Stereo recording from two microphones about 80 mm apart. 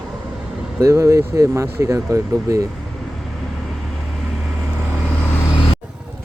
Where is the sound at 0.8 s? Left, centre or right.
Right.